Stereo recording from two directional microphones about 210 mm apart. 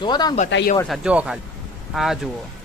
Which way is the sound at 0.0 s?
20° left (ahead or behind).